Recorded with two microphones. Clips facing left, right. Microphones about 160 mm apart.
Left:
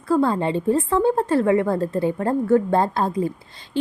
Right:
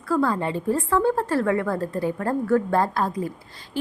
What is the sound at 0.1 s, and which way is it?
A woman's voice, 25° left (ahead or behind).